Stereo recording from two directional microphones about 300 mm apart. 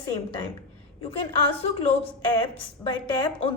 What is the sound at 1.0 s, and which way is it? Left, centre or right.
A woman's voice, centre.